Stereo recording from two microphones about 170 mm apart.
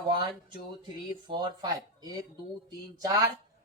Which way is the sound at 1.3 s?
25° right (ahead or behind).